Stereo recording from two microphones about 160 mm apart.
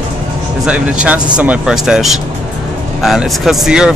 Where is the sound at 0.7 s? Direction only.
5° right (ahead or behind).